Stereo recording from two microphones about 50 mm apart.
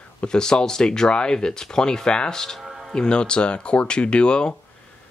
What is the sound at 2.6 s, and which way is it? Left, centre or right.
Music, centre.